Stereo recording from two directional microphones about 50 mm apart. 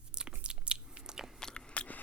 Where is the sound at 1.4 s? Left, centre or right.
Centre.